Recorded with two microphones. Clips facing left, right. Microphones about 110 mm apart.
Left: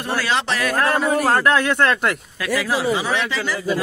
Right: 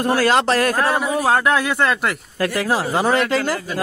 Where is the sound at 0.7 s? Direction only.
10° right (ahead or behind).